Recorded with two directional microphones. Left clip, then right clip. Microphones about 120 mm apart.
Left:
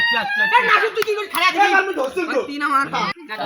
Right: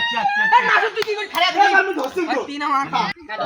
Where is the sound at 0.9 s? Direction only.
10° left (ahead or behind).